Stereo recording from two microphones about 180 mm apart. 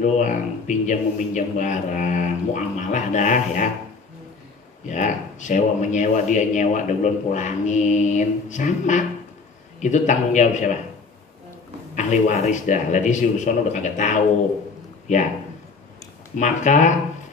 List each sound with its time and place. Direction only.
0.0 s a man's voice: 45° left (ahead or behind)
4.8 s a man's voice: 45° left (ahead or behind)
11.9 s a man's voice: 45° left (ahead or behind)
16.3 s a man's voice: 45° left (ahead or behind)